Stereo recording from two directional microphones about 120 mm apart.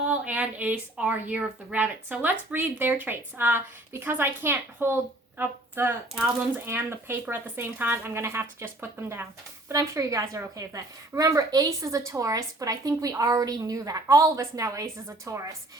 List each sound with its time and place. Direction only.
0.1 s a woman's voice: 10° right (ahead or behind)